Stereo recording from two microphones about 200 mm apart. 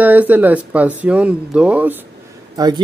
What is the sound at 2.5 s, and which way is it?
Speech, 20° right (ahead or behind).